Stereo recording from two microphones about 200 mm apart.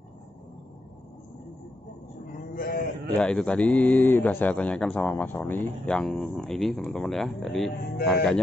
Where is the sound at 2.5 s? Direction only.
50° left (ahead or behind).